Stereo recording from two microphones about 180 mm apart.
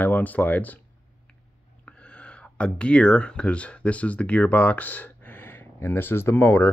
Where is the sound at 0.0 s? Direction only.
10° left (ahead or behind).